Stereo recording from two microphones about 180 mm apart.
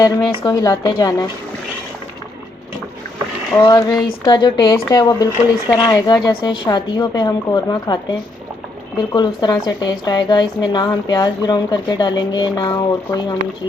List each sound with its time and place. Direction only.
0.0 s speech: 20° left (ahead or behind)
3.5 s speech: 20° left (ahead or behind)
9.0 s speech: 25° left (ahead or behind)